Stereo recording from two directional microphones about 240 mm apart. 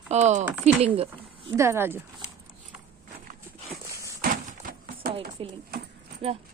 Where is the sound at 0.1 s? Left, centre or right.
Right.